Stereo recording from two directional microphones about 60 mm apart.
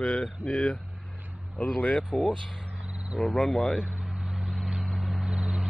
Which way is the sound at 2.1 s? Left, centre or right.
Centre.